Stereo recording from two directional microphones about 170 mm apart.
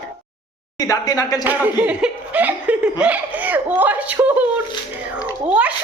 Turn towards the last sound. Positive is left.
turn(degrees=-5)  # may be behind; listen again after turning